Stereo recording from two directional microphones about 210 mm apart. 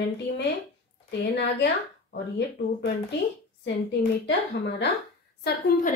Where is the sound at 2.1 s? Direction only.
50° left (ahead or behind).